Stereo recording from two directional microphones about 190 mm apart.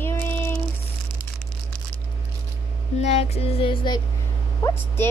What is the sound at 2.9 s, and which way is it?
Music, 35° left (ahead or behind).